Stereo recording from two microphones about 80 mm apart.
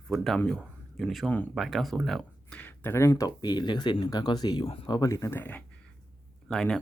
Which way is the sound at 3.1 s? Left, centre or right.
Left.